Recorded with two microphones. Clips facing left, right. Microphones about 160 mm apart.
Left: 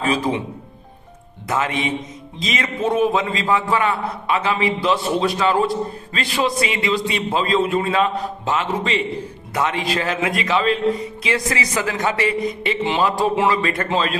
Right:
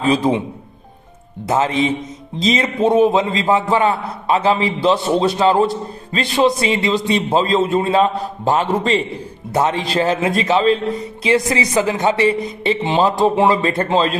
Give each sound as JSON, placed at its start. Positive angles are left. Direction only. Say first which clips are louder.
{"t": 1.5, "sound": "a man's voice", "louder": "right 5 dB", "side_deg": -30}
{"t": 7.5, "sound": "a man's voice", "louder": "right 1 dB", "side_deg": -25}